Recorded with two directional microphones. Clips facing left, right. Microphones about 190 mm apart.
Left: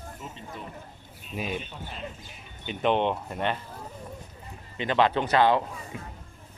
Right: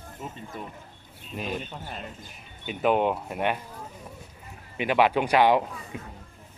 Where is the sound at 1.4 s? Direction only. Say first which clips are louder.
Right 4 dB; 45° right (ahead or behind).